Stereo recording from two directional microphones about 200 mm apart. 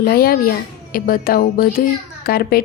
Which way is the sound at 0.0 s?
50° left (ahead or behind).